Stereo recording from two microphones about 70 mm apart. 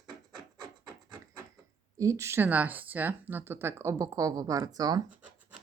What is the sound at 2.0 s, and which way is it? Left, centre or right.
Speech, right.